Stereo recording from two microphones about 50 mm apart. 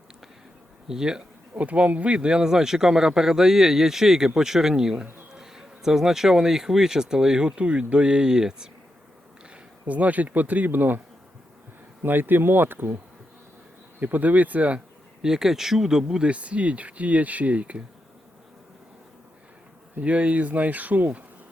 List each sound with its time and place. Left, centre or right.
0.9 s speech: centre
1.5 s speech: right
9.8 s speech: right
12.0 s speech: right
14.0 s speech: right
15.2 s speech: centre; by 17.8 s right
20.0 s speech: right